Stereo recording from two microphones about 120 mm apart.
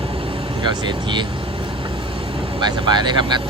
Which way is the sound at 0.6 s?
40° right (ahead or behind).